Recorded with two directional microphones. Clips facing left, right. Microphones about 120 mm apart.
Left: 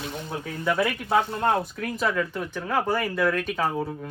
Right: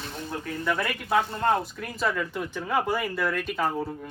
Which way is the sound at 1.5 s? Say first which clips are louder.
Left 1 dB; centre (ahead or behind).